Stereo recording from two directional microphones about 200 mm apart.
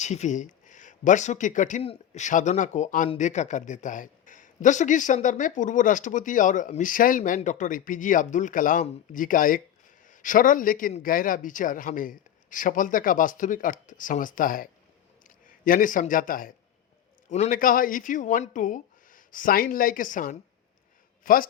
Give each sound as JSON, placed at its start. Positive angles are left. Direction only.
{"t": 0.0, "sound": "a man's voice", "side_deg": 35}